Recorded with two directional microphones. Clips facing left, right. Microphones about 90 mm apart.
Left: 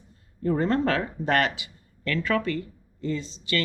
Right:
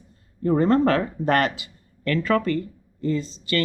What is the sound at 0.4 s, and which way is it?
Speech, 40° right (ahead or behind).